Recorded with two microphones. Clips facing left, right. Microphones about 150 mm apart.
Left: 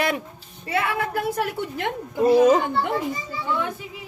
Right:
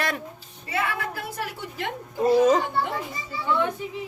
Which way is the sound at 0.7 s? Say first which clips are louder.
Left 4 dB; 60° left (ahead or behind).